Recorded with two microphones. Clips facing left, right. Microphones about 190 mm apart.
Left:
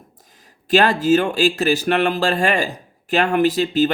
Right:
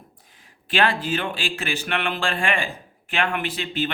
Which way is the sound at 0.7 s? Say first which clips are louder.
Left 8 dB; 40° left (ahead or behind).